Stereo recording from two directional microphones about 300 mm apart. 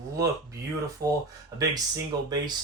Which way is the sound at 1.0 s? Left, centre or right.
Centre.